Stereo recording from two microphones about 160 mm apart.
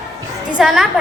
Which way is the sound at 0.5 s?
5° right (ahead or behind).